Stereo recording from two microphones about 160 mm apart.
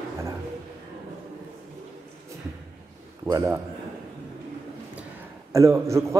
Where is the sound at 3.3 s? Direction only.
20° right (ahead or behind).